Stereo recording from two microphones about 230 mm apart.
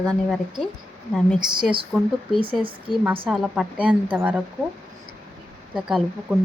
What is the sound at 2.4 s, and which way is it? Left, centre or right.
Speech, right.